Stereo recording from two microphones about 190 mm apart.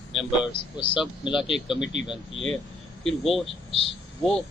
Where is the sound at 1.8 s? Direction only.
70° left (ahead or behind).